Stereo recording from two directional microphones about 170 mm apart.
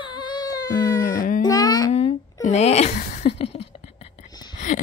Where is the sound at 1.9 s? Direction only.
35° left (ahead or behind).